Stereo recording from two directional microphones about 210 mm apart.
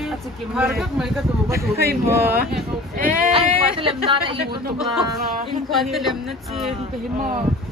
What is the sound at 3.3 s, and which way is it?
Speech, 25° right (ahead or behind).